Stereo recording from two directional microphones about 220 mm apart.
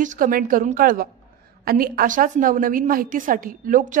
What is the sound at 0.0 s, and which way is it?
A woman's voice, 35° right (ahead or behind).